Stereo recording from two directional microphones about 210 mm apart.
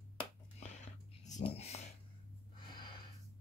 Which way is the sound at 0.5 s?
35° left (ahead or behind).